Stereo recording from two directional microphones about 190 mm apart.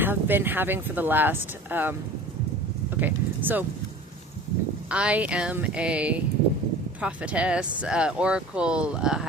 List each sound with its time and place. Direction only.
0.0 s speech: 10° right (ahead or behind)
4.9 s speech: 5° right (ahead or behind)